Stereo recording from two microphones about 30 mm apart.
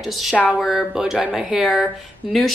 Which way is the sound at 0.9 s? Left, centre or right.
Centre.